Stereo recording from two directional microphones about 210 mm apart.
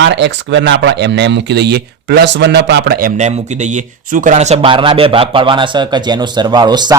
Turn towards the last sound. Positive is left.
turn(degrees=-20)  # may be behind; listen again after turning